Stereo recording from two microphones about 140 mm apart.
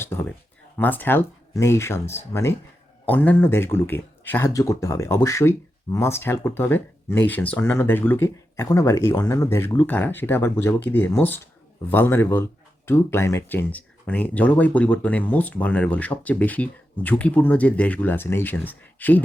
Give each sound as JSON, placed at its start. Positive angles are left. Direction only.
{"t": 0.0, "sound": "speech", "side_deg": 15}